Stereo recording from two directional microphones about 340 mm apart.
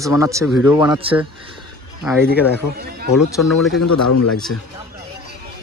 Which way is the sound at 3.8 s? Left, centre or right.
Left.